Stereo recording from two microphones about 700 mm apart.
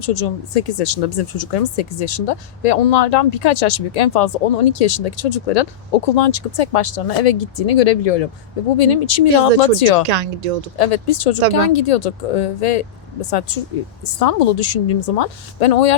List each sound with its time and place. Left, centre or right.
0.0 s speech: left
10.1 s speech: right
10.8 s speech: left